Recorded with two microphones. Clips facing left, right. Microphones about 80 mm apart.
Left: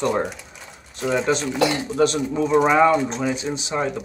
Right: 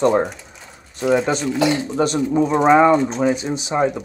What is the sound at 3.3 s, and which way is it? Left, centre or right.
Speech, right.